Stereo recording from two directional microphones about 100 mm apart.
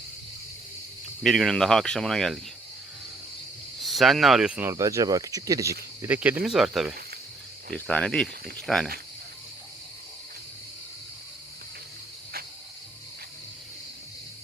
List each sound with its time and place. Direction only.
1.2 s speech: centre (ahead or behind)
3.8 s speech: centre (ahead or behind)
4.7 s speech: 35° right (ahead or behind)
6.1 s speech: 15° right (ahead or behind)
6.4 s speech: 5° right (ahead or behind)
7.7 s speech: 10° left (ahead or behind)